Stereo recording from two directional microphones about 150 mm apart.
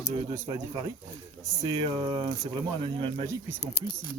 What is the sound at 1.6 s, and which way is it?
Speech, 30° right (ahead or behind).